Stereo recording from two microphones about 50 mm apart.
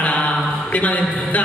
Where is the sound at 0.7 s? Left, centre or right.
Left.